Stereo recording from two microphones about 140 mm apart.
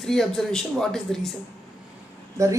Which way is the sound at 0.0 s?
Centre (ahead or behind).